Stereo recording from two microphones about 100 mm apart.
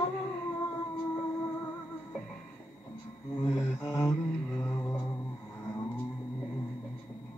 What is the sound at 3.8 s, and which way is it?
Mantra, 30° left (ahead or behind).